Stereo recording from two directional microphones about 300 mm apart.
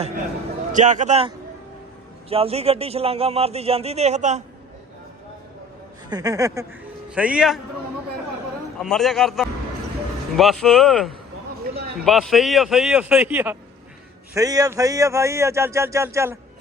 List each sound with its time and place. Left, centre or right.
0.7 s speech: right
2.3 s speech: centre
6.1 s speech: centre
8.8 s speech: centre